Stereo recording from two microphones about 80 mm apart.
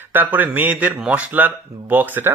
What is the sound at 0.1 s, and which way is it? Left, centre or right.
Speech, right.